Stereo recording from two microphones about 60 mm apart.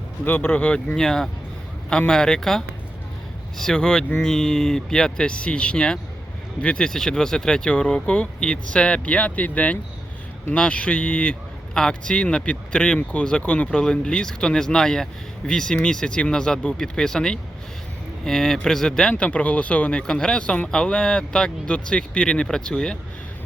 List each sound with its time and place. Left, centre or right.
0.3 s speech: left
0.9 s speech: centre